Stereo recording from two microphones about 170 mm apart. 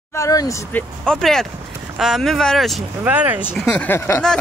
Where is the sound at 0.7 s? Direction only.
5° left (ahead or behind).